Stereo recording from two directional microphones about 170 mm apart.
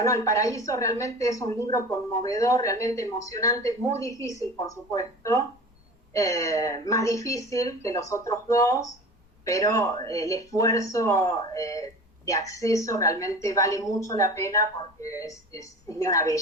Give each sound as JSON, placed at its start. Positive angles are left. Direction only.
{"t": 0.0, "sound": "a woman's voice", "side_deg": 20}